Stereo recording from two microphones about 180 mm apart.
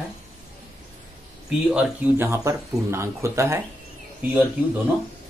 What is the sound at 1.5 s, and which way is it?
Speech, 5° right (ahead or behind).